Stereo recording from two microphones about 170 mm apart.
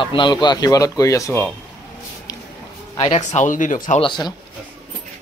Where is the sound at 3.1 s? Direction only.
45° left (ahead or behind).